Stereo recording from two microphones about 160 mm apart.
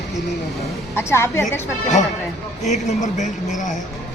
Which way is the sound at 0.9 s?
15° left (ahead or behind).